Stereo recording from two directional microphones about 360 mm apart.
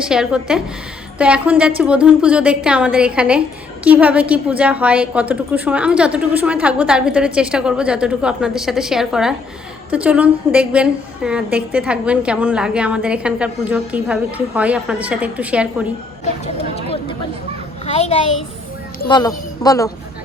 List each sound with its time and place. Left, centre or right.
0.0 s a woman's voice: centre
16.7 s a sound: centre
17.8 s a child's voice: centre